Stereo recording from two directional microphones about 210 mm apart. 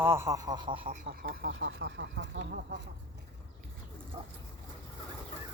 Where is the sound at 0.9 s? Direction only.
45° right (ahead or behind).